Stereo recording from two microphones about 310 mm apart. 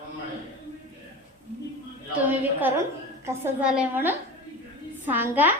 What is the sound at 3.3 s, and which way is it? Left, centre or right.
A woman's voice, centre.